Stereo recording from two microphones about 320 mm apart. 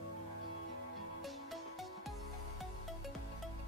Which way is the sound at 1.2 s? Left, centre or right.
Centre.